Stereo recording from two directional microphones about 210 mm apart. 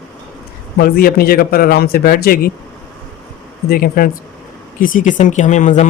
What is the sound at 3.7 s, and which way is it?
A man's voice, 45° left (ahead or behind).